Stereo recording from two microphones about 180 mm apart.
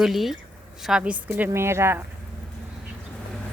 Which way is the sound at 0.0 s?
Centre (ahead or behind).